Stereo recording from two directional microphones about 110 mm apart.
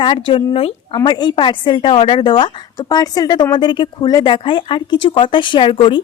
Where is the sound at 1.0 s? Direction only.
40° left (ahead or behind).